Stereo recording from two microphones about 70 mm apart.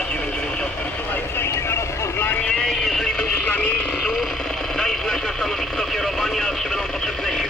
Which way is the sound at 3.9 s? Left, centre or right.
Centre.